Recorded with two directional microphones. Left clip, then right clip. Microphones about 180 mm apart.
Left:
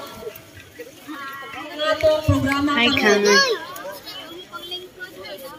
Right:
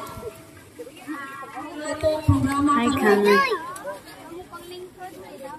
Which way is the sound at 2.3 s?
50° left (ahead or behind).